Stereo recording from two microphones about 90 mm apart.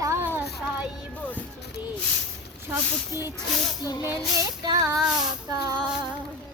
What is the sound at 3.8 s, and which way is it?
Speech, 45° left (ahead or behind).